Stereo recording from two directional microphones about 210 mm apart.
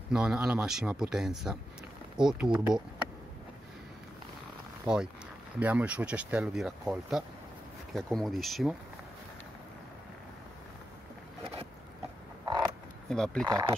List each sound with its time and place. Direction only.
0.1 s speech: 5° right (ahead or behind)
4.8 s speech: 5° right (ahead or behind)
12.4 s a sound: 20° right (ahead or behind)
13.1 s speech: 5° left (ahead or behind)
13.5 s speech: 20° right (ahead or behind)